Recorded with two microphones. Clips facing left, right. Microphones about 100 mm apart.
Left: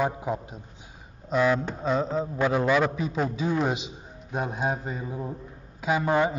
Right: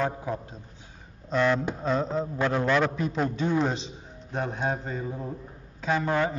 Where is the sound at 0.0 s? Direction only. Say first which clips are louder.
Left 2 dB; 15° left (ahead or behind).